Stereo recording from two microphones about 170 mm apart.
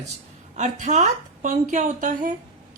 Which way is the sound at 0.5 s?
45° right (ahead or behind).